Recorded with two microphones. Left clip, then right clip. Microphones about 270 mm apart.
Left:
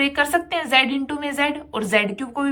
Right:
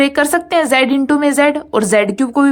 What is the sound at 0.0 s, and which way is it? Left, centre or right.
A woman's voice, centre.